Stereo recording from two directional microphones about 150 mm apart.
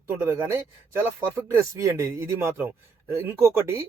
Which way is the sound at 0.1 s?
15° right (ahead or behind).